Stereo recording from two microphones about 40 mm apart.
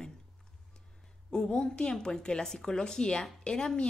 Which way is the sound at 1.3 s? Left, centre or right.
Left.